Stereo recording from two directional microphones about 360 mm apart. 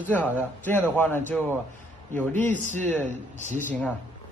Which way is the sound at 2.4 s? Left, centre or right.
Centre.